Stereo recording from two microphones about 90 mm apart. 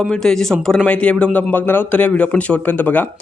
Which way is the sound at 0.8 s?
15° left (ahead or behind).